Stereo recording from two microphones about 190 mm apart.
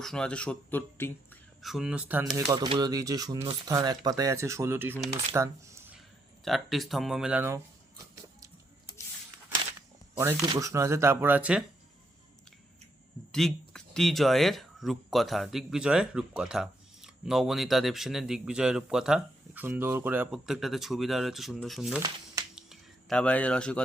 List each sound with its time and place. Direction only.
0.0 s speech: 5° left (ahead or behind)
1.6 s speech: centre (ahead or behind)
6.4 s speech: centre (ahead or behind)
10.2 s speech: 15° right (ahead or behind)
13.3 s speech: centre (ahead or behind)
22.5 s a sound: centre (ahead or behind)